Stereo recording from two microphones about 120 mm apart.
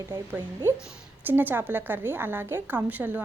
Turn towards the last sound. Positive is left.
turn(degrees=-15)  # may be behind; listen again after turning